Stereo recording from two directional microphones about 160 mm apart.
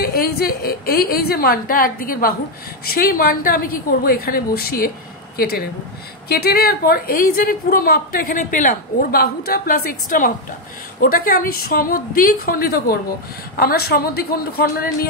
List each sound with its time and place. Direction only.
0.0 s a woman's voice: 75° left (ahead or behind)
6.2 s a woman's voice: 75° left (ahead or behind)